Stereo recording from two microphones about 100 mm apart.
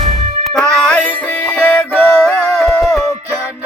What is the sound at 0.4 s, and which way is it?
Music, 5° left (ahead or behind).